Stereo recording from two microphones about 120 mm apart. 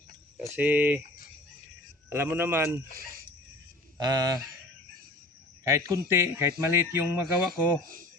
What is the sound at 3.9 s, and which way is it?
Speech, 35° right (ahead or behind).